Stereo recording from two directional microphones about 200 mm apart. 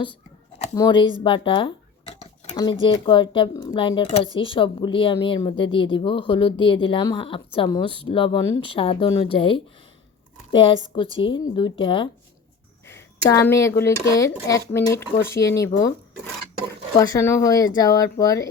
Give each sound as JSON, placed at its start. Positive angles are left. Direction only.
{"t": 0.8, "sound": "speech", "side_deg": 25}
{"t": 1.2, "sound": "a sound", "side_deg": 25}
{"t": 2.6, "sound": "speech", "side_deg": 20}
{"t": 12.8, "sound": "speech", "side_deg": 10}
{"t": 17.0, "sound": "speech", "side_deg": 15}